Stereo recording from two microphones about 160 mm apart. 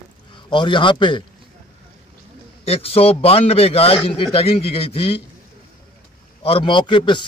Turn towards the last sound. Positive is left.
turn(degrees=30)  # may be behind; listen again after turning